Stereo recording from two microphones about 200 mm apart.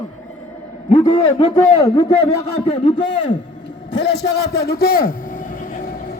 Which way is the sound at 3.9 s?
60° left (ahead or behind).